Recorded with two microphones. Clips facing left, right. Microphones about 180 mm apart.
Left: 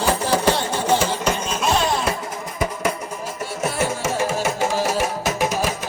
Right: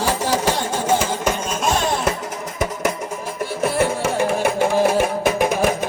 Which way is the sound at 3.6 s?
60° right (ahead or behind).